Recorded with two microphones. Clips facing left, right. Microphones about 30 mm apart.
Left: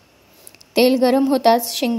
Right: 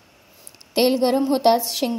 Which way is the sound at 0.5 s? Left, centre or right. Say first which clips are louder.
Left 4 dB; centre.